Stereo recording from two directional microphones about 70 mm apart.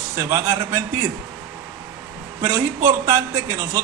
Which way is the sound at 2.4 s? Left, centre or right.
Right.